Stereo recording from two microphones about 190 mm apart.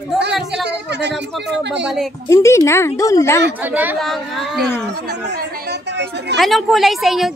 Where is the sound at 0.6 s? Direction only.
65° right (ahead or behind).